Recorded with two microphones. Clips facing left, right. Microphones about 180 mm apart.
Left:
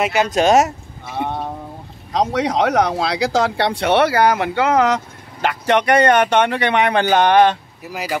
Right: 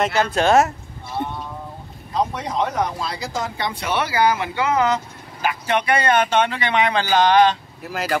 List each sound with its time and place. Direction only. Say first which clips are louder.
0.0 s speech: left 3 dB; 15° left (ahead or behind)
1.0 s a sound: left 4 dB; 85° left
2.1 s speech: left 5 dB; 85° left; by 7.5 s 60° left (ahead or behind)
7.8 s speech: right 1 dB; 10° left (ahead or behind)